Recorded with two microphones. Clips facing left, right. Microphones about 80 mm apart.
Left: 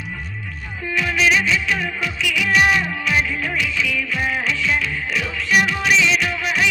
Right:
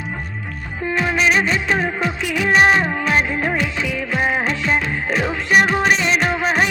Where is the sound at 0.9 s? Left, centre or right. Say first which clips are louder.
Right 1 dB; right.